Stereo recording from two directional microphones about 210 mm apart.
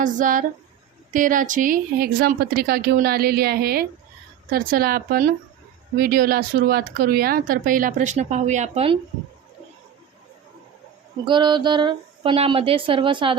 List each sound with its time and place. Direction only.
0.0 s a woman's voice: 40° right (ahead or behind)
11.3 s speech: 20° right (ahead or behind)